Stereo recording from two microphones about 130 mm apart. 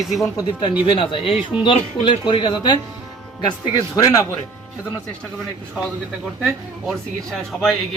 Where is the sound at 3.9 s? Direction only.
25° left (ahead or behind).